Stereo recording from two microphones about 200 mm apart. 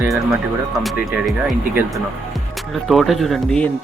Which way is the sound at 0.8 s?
Centre (ahead or behind).